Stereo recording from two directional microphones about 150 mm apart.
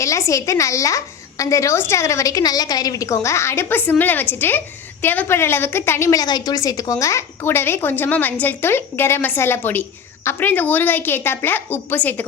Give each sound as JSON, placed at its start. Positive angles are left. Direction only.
{"t": 0.0, "sound": "a woman's voice", "side_deg": 20}